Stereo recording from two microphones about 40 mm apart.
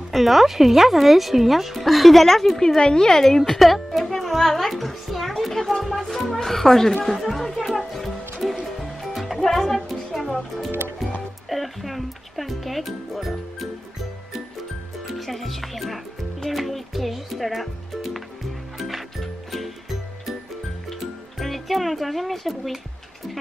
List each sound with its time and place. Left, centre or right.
0.1 s speech: centre
2.8 s speech: left
3.1 s a child's voice: centre
7.1 s music: centre
9.4 s music: centre
11.4 s music: centre
15.0 s speech: centre
18.8 s music: centre
21.4 s speech: centre